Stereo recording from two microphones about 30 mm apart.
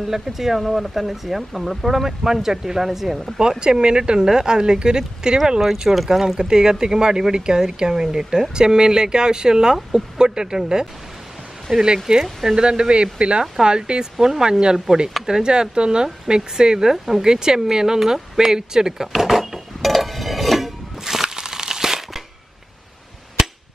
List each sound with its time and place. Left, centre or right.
0.0 s speech: centre
3.3 s speech: right
5.6 s speech: centre
6.0 s speech: centre
11.8 s speech: right
14.2 s speech: centre
16.9 s speech: centre
17.3 s speech: right
19.1 s dishes: centre
21.0 s a sound: centre